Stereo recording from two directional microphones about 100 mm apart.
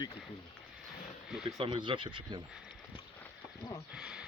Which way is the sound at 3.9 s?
10° right (ahead or behind).